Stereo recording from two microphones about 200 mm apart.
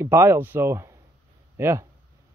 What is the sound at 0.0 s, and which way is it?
A man's voice, 10° right (ahead or behind).